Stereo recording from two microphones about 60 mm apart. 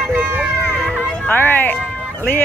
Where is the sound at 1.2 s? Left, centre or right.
Left.